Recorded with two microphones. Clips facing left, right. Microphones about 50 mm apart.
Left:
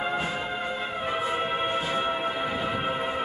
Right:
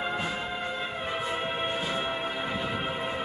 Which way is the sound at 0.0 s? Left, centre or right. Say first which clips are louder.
Left 2 dB; centre.